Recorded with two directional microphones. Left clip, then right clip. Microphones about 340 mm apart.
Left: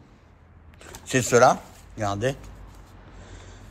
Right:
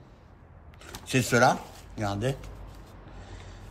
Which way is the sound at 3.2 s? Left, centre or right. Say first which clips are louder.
Left 2 dB; centre.